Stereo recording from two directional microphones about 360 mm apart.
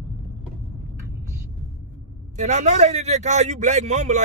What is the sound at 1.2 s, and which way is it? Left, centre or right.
Vehicle, centre.